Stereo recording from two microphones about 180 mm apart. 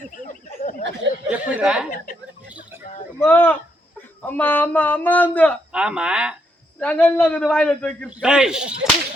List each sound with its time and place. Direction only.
0.3 s a sound: 45° left (ahead or behind)
1.3 s speech: 5° right (ahead or behind)
3.2 s speech: 10° left (ahead or behind)
5.7 s speech: 5° right (ahead or behind)
6.7 s speech: 10° left (ahead or behind)
8.1 s speech: 5° right (ahead or behind)